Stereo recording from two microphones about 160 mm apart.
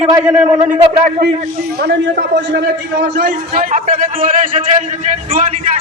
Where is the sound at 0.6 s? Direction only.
45° right (ahead or behind).